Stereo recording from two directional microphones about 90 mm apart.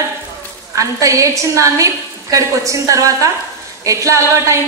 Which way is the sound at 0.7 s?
35° right (ahead or behind).